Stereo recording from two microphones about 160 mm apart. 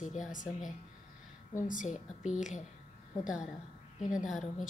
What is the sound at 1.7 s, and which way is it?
Speech, 55° left (ahead or behind).